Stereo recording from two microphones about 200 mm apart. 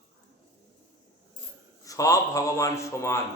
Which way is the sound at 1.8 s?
15° left (ahead or behind).